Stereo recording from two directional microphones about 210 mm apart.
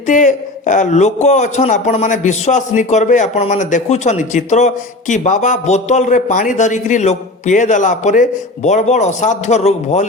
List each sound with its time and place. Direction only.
0.1 s a man's voice: 35° left (ahead or behind)